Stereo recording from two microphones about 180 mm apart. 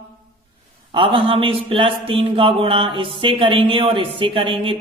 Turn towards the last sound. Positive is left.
turn(degrees=-30)  # may be behind; listen again after turning